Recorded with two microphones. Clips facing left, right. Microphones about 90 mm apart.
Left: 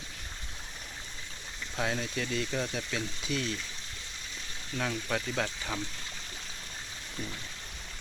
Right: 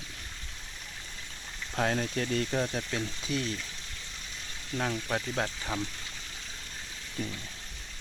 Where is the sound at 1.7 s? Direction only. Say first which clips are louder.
Right 3 dB; 45° right (ahead or behind).